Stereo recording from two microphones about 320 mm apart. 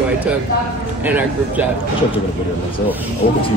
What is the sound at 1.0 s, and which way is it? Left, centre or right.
Speech, centre.